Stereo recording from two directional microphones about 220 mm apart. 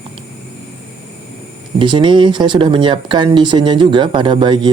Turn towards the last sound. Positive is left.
turn(degrees=-20)  # may be behind; listen again after turning